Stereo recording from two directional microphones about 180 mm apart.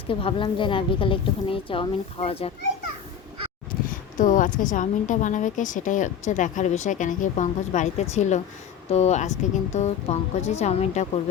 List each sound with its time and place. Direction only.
0.1 s a woman's voice: 30° left (ahead or behind)
4.2 s a woman's voice: 45° left (ahead or behind)